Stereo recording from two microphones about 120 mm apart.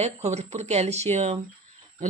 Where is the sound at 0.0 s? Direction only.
65° right (ahead or behind).